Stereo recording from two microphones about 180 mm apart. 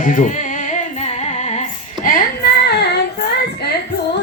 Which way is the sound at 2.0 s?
50° left (ahead or behind).